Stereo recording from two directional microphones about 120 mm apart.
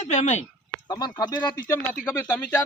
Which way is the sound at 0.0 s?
75° left (ahead or behind).